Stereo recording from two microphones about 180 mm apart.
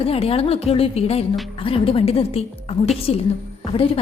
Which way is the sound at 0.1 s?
30° left (ahead or behind).